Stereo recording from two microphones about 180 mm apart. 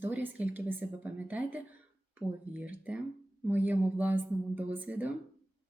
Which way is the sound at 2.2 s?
30° right (ahead or behind).